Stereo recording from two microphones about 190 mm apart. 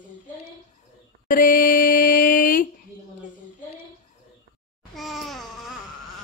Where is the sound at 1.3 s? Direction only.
45° left (ahead or behind).